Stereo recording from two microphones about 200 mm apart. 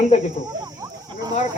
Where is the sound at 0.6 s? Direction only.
20° right (ahead or behind).